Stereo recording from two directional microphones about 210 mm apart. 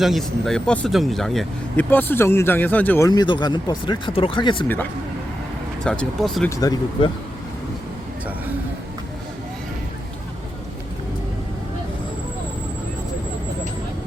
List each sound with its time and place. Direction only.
0.0 s speech: centre (ahead or behind)
3.1 s speech: 20° left (ahead or behind)
5.8 s speech: 5° left (ahead or behind)
6.5 s speech: 15° left (ahead or behind)